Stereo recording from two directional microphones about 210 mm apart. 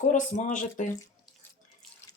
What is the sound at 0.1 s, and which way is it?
Speech, 35° left (ahead or behind).